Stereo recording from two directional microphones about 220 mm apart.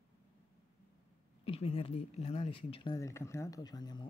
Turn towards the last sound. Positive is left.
turn(degrees=20)  # may be behind; listen again after turning